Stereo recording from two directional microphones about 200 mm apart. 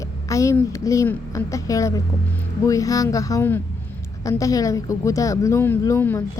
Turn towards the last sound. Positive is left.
turn(degrees=15)  # may be behind; listen again after turning